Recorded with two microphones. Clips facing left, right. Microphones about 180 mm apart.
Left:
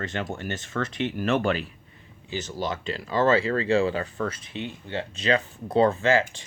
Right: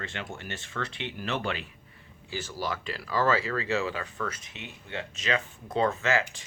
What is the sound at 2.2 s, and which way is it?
Speech, 20° left (ahead or behind).